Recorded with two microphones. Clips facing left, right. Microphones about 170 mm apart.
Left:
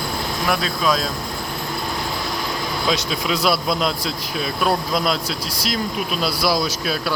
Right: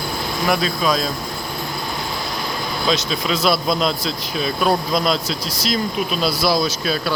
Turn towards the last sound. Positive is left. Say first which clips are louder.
# right 2 dB
turn(degrees=10)  # may be behind; listen again after turning